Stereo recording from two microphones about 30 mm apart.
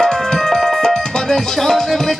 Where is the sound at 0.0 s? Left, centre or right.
Centre.